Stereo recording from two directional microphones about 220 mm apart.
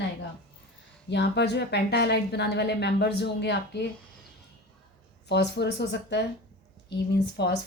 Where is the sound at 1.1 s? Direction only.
50° left (ahead or behind).